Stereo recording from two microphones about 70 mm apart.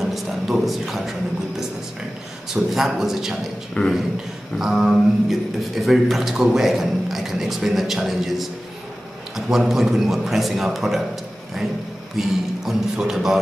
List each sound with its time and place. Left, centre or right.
0.0 s a man's voice: centre
2.5 s a man's voice: centre
3.8 s speech: left
4.6 s a man's voice: centre
12.2 s a man's voice: centre